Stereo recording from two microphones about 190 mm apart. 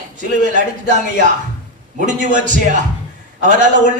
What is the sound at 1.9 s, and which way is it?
A man's voice, 40° right (ahead or behind).